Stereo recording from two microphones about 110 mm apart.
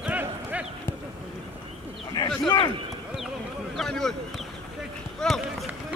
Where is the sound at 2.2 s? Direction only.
35° left (ahead or behind).